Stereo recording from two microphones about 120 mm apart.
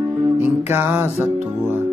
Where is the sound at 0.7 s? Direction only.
15° right (ahead or behind).